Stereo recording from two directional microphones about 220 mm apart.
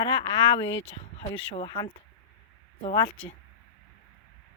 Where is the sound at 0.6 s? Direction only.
60° left (ahead or behind).